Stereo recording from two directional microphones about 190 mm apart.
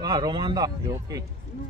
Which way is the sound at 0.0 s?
20° right (ahead or behind).